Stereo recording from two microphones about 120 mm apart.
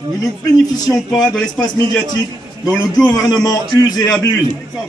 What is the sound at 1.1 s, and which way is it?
Speech, 5° left (ahead or behind).